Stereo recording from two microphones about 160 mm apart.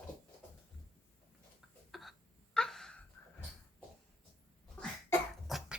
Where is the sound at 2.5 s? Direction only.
5° left (ahead or behind).